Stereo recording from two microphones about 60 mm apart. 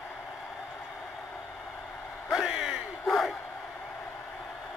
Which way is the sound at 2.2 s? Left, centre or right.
Centre.